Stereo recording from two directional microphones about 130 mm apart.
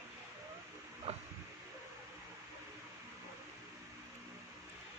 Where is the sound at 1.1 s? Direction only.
50° right (ahead or behind).